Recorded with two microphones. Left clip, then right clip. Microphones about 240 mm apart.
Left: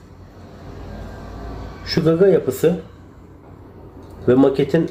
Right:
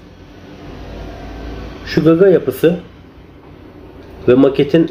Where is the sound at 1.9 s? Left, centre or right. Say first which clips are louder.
Right 5 dB; centre.